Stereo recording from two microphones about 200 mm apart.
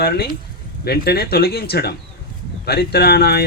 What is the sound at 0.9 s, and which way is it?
Speech, 50° left (ahead or behind).